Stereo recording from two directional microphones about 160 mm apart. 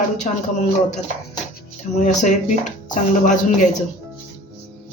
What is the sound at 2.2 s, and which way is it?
A man's voice, 50° left (ahead or behind).